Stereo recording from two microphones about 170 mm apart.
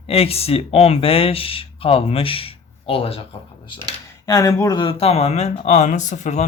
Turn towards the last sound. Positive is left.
turn(degrees=45)  # may be behind; listen again after turning